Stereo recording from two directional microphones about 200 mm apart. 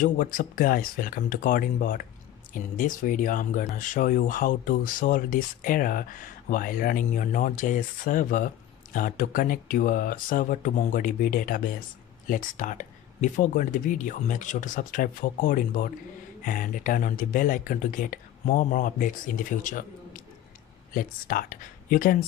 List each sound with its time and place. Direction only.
0.0 s speech: 45° left (ahead or behind)
20.9 s speech: 45° left (ahead or behind)